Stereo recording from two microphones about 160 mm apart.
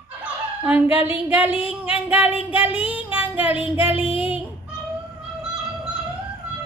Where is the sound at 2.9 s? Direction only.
10° right (ahead or behind).